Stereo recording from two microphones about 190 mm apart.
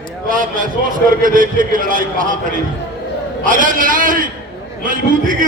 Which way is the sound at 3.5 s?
45° right (ahead or behind).